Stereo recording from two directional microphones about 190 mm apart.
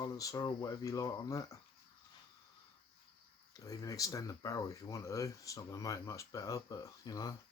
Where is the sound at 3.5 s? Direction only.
15° left (ahead or behind).